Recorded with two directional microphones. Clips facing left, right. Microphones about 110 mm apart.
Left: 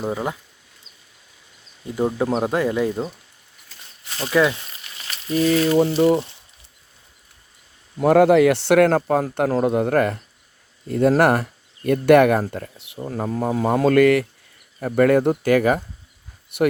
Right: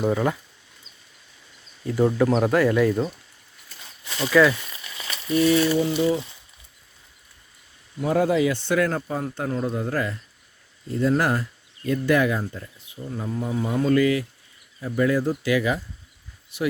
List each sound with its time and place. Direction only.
0.0 s speech: 15° left (ahead or behind)
1.9 s speech: 20° left (ahead or behind)
4.2 s speech: 25° left (ahead or behind)
6.0 s speech: 65° left (ahead or behind)
8.0 s speech: 70° left (ahead or behind)
13.1 s speech: 85° left; by 16.7 s 60° left (ahead or behind)